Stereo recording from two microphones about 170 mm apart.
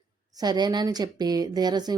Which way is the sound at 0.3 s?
25° right (ahead or behind).